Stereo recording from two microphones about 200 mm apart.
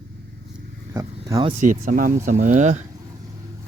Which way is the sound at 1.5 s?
40° right (ahead or behind).